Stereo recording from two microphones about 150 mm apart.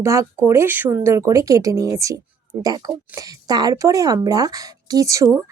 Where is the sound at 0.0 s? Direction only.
20° right (ahead or behind).